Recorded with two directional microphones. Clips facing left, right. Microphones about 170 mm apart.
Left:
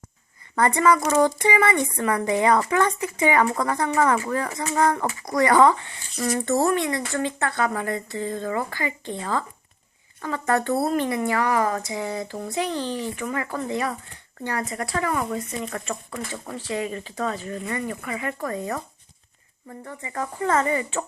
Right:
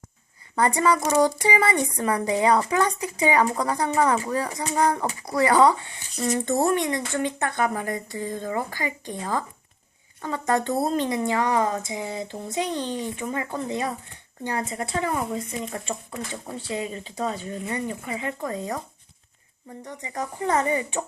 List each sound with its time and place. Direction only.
0.5 s speech: 10° right (ahead or behind)
19.8 s speech: 15° right (ahead or behind)